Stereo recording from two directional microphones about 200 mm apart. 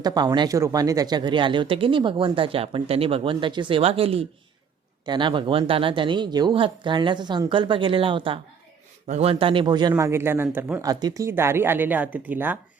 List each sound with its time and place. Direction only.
0.0 s speech: 20° right (ahead or behind)